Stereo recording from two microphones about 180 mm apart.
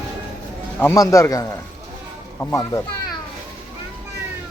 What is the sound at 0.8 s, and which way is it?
A man's voice, 15° left (ahead or behind).